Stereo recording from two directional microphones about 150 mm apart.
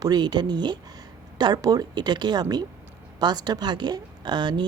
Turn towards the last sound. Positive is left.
turn(degrees=-30)  # may be behind; listen again after turning